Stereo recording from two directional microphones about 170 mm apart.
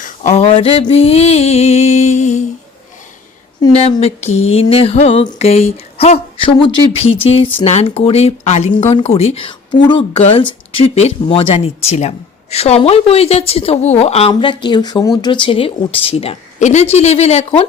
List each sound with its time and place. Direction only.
0.0 s speech: 45° left (ahead or behind)
3.7 s speech: 35° left (ahead or behind)